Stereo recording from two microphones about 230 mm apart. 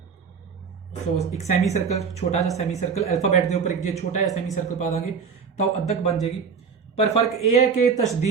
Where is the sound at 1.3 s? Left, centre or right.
Left.